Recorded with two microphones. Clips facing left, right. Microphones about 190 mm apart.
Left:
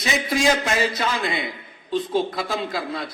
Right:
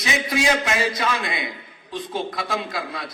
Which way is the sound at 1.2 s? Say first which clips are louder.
Left 3 dB; centre (ahead or behind).